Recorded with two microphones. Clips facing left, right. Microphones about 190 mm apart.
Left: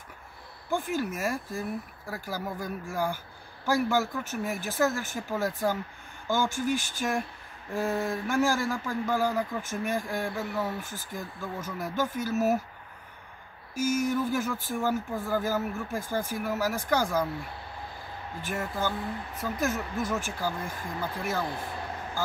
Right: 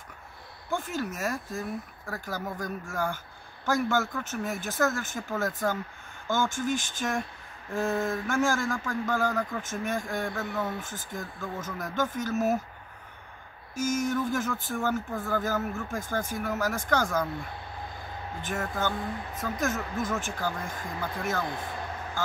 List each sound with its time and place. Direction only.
0.7 s speech: 10° left (ahead or behind)
13.7 s speech: 10° left (ahead or behind)
18.4 s speech: 10° left (ahead or behind)